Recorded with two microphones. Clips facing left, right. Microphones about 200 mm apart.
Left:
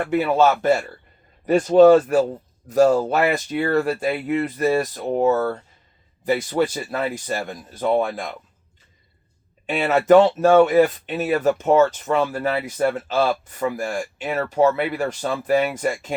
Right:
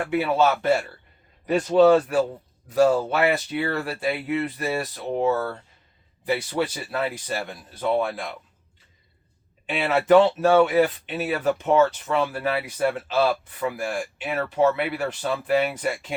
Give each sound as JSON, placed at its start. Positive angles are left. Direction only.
{"t": 0.1, "sound": "speech", "side_deg": 45}
{"t": 9.6, "sound": "speech", "side_deg": 45}